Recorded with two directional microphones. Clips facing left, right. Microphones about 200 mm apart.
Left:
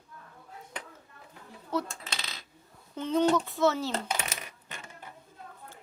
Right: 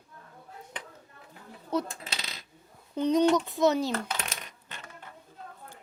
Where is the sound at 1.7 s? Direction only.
20° right (ahead or behind).